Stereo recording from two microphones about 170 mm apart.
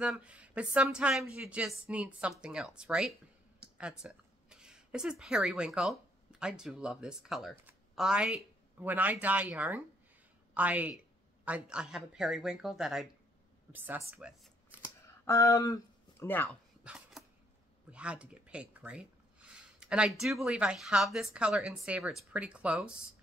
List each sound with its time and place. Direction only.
0.0 s speech: 5° right (ahead or behind)
14.4 s shuffling cards: 10° right (ahead or behind)
15.2 s speech: 15° left (ahead or behind)
16.4 s dog: 5° right (ahead or behind)
17.9 s speech: 5° right (ahead or behind)